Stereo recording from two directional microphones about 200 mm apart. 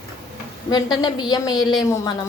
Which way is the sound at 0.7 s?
20° left (ahead or behind).